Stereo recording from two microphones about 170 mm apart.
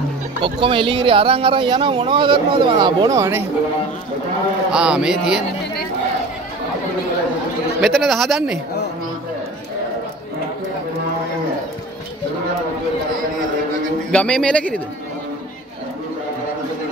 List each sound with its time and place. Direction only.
0.4 s speech: 30° right (ahead or behind)
4.6 s a man's voice: 5° right (ahead or behind)
7.8 s a man's voice: centre (ahead or behind)
14.1 s speech: 5° left (ahead or behind)